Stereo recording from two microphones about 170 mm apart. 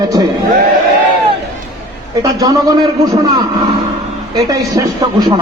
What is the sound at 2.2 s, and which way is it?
Speech, 20° right (ahead or behind).